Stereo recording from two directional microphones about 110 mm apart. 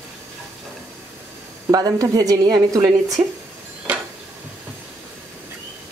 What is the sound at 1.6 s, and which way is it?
A woman's voice, 35° right (ahead or behind).